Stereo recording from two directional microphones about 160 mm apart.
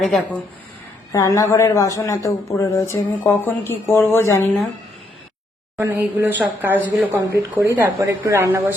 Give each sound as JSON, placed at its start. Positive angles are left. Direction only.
{"t": 0.0, "sound": "a woman's voice", "side_deg": 0}
{"t": 1.1, "sound": "a woman's voice", "side_deg": 20}
{"t": 5.7, "sound": "speech", "side_deg": -15}